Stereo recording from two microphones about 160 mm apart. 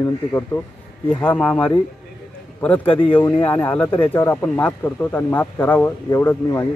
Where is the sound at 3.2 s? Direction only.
10° left (ahead or behind).